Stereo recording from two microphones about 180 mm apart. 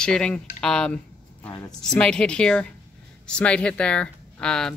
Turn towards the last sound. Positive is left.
turn(degrees=5)  # may be behind; listen again after turning